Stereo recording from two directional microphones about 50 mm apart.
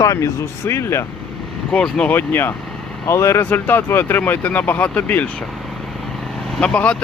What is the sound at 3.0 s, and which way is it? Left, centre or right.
Speech, left.